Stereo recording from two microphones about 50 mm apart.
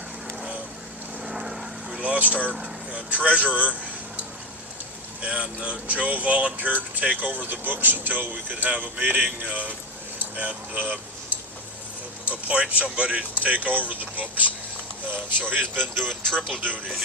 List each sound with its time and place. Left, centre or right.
1.2 s vehicle: centre
2.0 s vehicle: right
2.9 s speech: right
5.2 s speech: right
12.3 s speech: right
16.2 s speech: centre
16.5 s speech: right